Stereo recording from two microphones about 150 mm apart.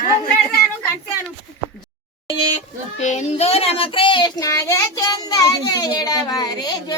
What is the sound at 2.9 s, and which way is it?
Child singing, 50° left (ahead or behind).